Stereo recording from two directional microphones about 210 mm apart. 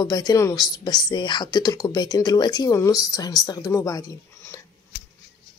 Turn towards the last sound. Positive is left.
turn(degrees=15)  # may be behind; listen again after turning